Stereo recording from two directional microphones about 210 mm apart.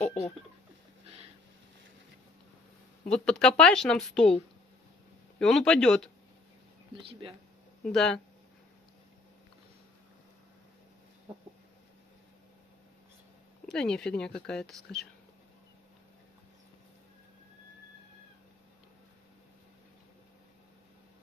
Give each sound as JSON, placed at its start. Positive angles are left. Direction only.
{"t": 0.0, "sound": "speech", "side_deg": 30}
{"t": 3.1, "sound": "a woman's voice", "side_deg": 5}
{"t": 5.4, "sound": "a woman's voice", "side_deg": 0}
{"t": 7.0, "sound": "speech", "side_deg": -25}
{"t": 7.8, "sound": "a woman's voice", "side_deg": 5}
{"t": 13.7, "sound": "a woman's voice", "side_deg": 0}